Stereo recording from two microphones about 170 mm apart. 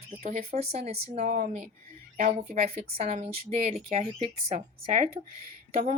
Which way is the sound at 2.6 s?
35° right (ahead or behind).